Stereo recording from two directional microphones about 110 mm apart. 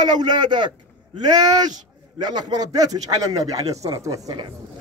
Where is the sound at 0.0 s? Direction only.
40° right (ahead or behind).